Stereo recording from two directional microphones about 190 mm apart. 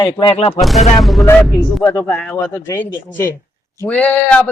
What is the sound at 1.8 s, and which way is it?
Speech, 10° left (ahead or behind).